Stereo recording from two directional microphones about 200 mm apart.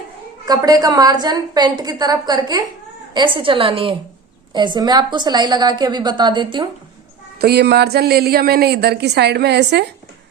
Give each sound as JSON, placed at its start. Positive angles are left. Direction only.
{"t": 0.4, "sound": "a woman's voice", "side_deg": -20}
{"t": 7.3, "sound": "a woman's voice", "side_deg": -50}